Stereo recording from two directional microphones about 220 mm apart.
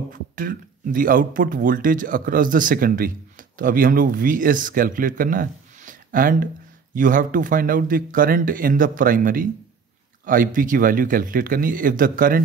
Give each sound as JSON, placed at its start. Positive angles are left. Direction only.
{"t": 0.1, "sound": "speech", "side_deg": -40}